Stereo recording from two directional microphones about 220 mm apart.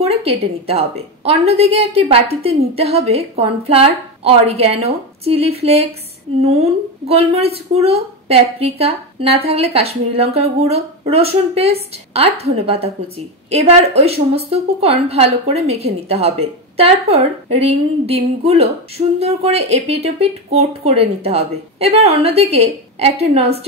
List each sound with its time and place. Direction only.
0.0 s a woman's voice: 30° right (ahead or behind)